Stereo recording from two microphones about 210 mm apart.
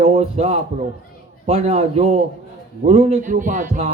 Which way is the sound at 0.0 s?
30° right (ahead or behind).